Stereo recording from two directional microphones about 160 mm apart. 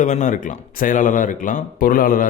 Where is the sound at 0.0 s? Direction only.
50° left (ahead or behind).